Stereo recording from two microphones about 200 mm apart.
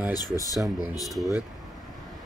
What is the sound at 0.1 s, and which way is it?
Speech, 20° left (ahead or behind).